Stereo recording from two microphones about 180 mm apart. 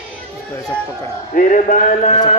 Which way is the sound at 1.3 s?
45° left (ahead or behind).